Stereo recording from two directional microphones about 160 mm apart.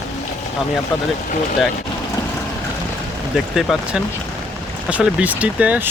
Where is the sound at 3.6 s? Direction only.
Centre (ahead or behind).